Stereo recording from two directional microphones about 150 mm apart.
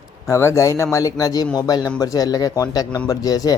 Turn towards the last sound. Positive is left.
turn(degrees=25)  # may be behind; listen again after turning